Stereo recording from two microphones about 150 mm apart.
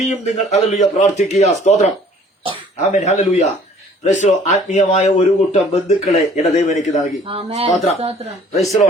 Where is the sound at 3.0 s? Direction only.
50° left (ahead or behind).